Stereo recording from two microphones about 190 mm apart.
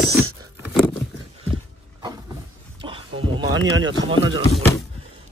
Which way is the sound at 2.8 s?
25° right (ahead or behind).